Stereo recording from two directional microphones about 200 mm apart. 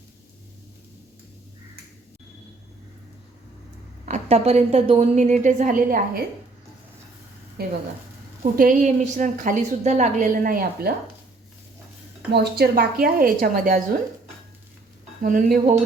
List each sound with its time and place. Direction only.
4.0 s a woman's voice: 35° right (ahead or behind)
7.6 s speech: 55° right (ahead or behind)
8.5 s a woman's voice: 40° right (ahead or behind)
12.3 s speech: 50° right (ahead or behind)
15.2 s a woman's voice: 45° right (ahead or behind)